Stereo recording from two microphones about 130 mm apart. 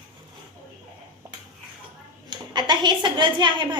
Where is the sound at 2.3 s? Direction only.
35° right (ahead or behind).